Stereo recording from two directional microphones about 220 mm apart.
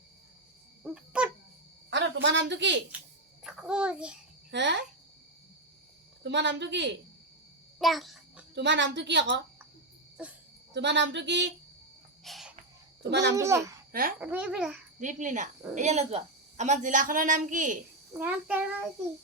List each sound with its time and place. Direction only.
0.9 s a sound: 5° right (ahead or behind)
1.9 s a woman's voice: 55° right (ahead or behind)
3.4 s a child's voice: 5° right (ahead or behind)
4.5 s a woman's voice: 55° right (ahead or behind)
6.2 s a woman's voice: 55° right (ahead or behind)
7.8 s a sound: centre (ahead or behind)
8.5 s a woman's voice: 55° right (ahead or behind)
10.2 s a child's voice: 5° right (ahead or behind)
10.8 s a woman's voice: 55° right (ahead or behind)
12.2 s cricket: centre (ahead or behind)
13.0 s a child's voice: 50° right (ahead or behind)
13.3 s a child's voice: 15° right (ahead or behind)
15.0 s a woman's voice: 35° right (ahead or behind)
18.2 s a child's voice: 5° right (ahead or behind)